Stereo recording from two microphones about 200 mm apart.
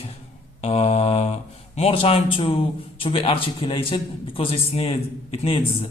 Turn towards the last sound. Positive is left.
turn(degrees=25)  # may be behind; listen again after turning